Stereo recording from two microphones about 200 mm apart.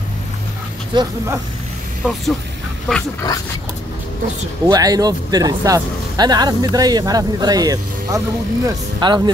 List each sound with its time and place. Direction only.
0.9 s speech: 15° right (ahead or behind)
2.9 s dog: 10° left (ahead or behind)
4.6 s speech: 20° right (ahead or behind)